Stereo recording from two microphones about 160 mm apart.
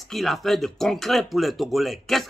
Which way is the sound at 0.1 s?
Centre (ahead or behind).